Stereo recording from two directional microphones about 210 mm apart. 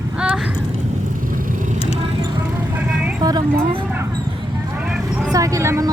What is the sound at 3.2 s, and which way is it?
Speech, 20° right (ahead or behind).